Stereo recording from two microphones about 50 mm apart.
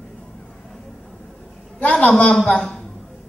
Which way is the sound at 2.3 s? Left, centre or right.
Centre.